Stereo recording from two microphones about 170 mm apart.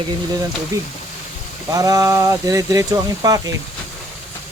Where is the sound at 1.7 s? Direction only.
20° right (ahead or behind).